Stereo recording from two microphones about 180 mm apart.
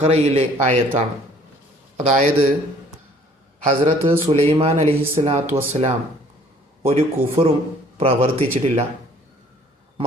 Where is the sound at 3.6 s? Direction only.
35° right (ahead or behind).